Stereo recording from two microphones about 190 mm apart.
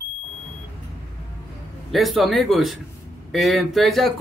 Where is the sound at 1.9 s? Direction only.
Centre (ahead or behind).